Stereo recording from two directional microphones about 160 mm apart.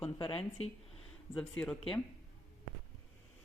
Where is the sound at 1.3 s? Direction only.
5° left (ahead or behind).